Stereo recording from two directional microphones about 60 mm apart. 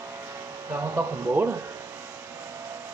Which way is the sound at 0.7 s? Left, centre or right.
Right.